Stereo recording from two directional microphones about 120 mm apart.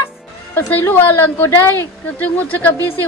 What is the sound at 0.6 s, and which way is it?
Speech, 15° left (ahead or behind).